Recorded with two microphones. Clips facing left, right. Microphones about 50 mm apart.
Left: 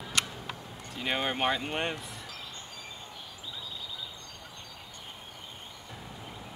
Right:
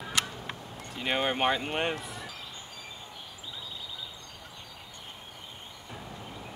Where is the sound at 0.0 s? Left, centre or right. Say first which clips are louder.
Right 1 dB; centre.